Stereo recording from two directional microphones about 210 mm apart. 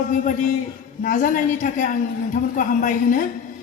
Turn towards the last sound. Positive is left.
turn(degrees=40)  # may be behind; listen again after turning